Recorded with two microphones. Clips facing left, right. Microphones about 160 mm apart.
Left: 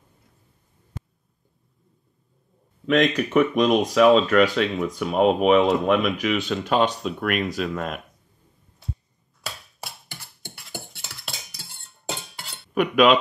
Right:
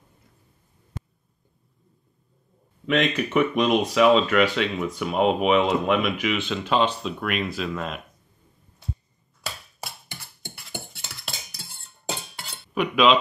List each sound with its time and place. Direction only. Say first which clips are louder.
2.9 s speech: left 3 dB; 45° left (ahead or behind)
8.8 s a sound: right 1 dB; centre (ahead or behind)
12.7 s speech: left 2 dB; 50° left (ahead or behind)